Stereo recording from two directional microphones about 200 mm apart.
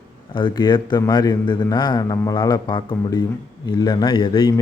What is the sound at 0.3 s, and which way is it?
Speech, 25° left (ahead or behind).